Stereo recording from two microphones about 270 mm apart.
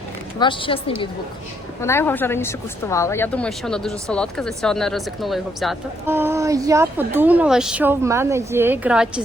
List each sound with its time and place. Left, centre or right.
0.3 s a woman's voice: centre